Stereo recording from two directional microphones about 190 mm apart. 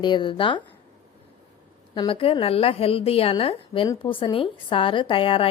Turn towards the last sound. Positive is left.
turn(degrees=30)  # may be behind; listen again after turning